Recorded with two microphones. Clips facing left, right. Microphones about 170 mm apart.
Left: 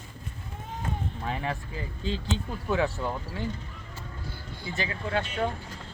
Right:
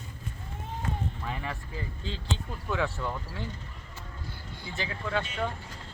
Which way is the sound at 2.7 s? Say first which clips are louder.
Left 4 dB; 40° left (ahead or behind).